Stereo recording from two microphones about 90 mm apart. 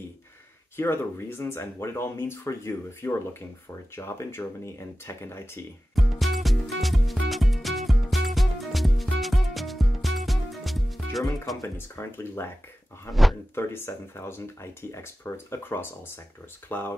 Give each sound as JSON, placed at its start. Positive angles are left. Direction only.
{"t": 0.7, "sound": "speech", "side_deg": 25}
{"t": 5.9, "sound": "music", "side_deg": 0}
{"t": 11.6, "sound": "speech", "side_deg": 30}
{"t": 13.1, "sound": "speech", "side_deg": 0}
{"t": 13.6, "sound": "speech", "side_deg": 25}